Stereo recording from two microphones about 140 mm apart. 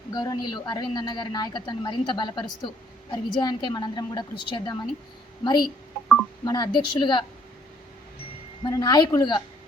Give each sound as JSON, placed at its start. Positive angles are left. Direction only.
{"t": 0.1, "sound": "speech", "side_deg": 30}
{"t": 6.4, "sound": "speech", "side_deg": 30}
{"t": 8.6, "sound": "speech", "side_deg": 30}